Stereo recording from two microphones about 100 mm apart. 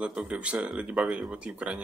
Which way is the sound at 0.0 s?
10° right (ahead or behind).